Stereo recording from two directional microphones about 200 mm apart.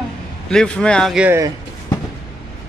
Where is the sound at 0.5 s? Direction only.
5° left (ahead or behind); by 1.5 s 10° right (ahead or behind).